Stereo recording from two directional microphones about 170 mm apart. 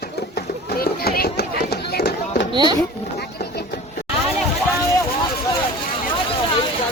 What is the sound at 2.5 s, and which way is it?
Speech, 30° right (ahead or behind).